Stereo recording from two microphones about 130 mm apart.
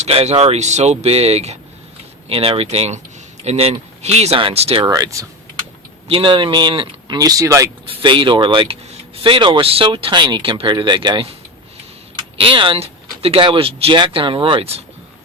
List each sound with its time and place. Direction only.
0.0 s speech: 55° right (ahead or behind)
4.9 s speech: 25° right (ahead or behind)
6.1 s speech: 45° right (ahead or behind); by 7.7 s 25° right (ahead or behind)
7.9 s speech: 40° right (ahead or behind)
12.4 s speech: 40° right (ahead or behind)